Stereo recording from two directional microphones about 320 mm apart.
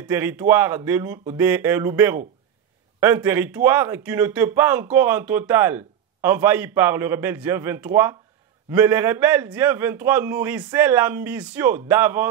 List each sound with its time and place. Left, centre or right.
0.0 s a man's voice: centre